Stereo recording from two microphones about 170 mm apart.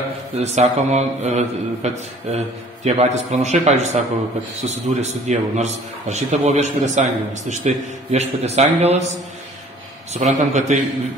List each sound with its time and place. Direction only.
0.4 s a man's voice: 40° right (ahead or behind)
10.1 s a man's voice: 45° right (ahead or behind)